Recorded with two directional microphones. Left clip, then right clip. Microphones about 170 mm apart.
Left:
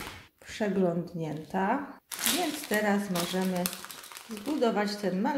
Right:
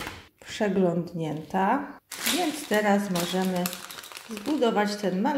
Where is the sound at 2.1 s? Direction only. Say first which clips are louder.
Right 1 dB; 40° left (ahead or behind).